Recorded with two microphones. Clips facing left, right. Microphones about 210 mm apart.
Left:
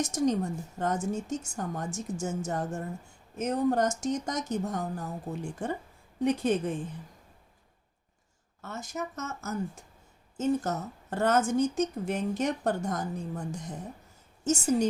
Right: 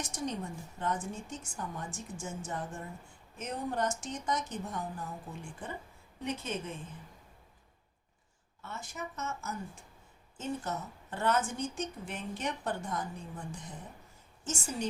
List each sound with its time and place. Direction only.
0.0 s a woman's voice: 45° left (ahead or behind)
8.6 s a woman's voice: 40° left (ahead or behind)